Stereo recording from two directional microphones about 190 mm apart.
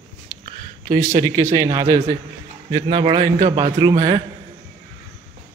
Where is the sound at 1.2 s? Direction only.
15° right (ahead or behind).